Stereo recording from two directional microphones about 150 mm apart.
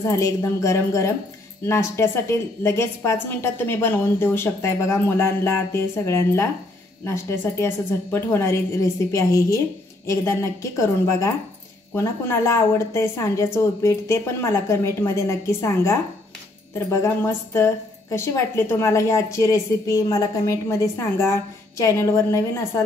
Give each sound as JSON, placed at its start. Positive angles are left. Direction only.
{"t": 0.0, "sound": "a woman's voice", "side_deg": 20}